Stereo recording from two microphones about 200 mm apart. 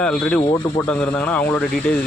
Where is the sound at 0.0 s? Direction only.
5° left (ahead or behind).